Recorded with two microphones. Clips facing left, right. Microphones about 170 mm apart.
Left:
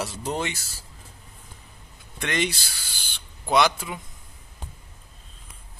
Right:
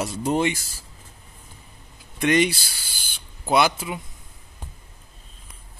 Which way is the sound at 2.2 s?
15° right (ahead or behind).